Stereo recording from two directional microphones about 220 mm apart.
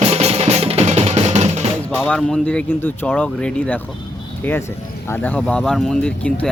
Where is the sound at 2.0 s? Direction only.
5° left (ahead or behind).